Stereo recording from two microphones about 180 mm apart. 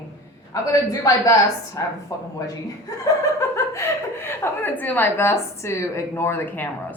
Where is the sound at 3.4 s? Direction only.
15° left (ahead or behind).